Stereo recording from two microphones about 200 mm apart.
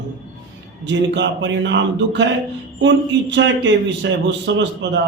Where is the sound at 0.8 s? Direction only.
65° right (ahead or behind).